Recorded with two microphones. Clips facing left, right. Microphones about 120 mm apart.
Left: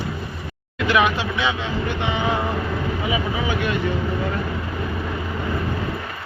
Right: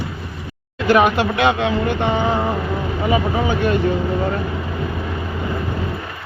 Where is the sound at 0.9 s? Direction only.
45° right (ahead or behind).